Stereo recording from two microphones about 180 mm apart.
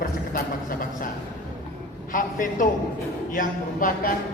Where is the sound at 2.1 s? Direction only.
45° left (ahead or behind).